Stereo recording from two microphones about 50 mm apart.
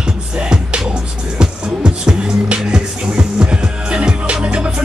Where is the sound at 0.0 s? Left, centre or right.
Centre.